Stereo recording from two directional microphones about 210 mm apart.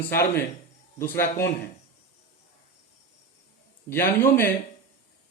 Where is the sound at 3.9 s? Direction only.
10° left (ahead or behind).